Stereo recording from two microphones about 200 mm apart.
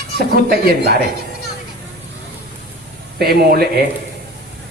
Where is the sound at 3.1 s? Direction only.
50° right (ahead or behind).